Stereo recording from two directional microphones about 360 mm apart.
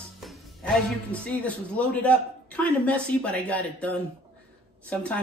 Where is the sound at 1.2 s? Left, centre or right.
Centre.